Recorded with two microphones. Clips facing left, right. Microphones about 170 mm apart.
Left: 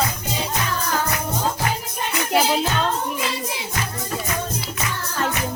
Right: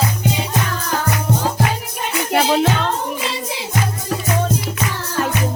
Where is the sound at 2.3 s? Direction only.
70° right (ahead or behind).